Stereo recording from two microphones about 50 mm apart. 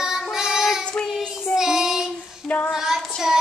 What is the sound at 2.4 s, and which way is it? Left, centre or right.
Child singing, left.